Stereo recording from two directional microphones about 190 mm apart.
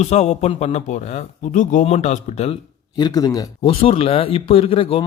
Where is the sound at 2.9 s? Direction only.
20° left (ahead or behind).